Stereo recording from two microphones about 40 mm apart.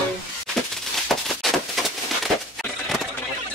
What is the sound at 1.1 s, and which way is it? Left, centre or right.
Firecracker, centre.